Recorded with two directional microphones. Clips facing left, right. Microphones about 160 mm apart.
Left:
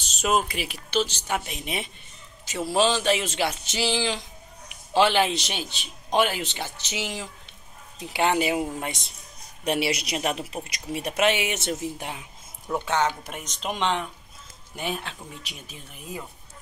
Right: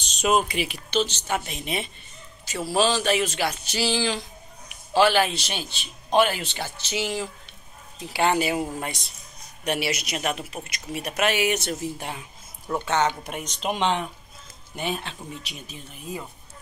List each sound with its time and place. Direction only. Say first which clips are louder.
0.0 s a man's voice: right 2 dB; 5° left (ahead or behind)
14.8 s a man's voice: right 2 dB; 5° left (ahead or behind)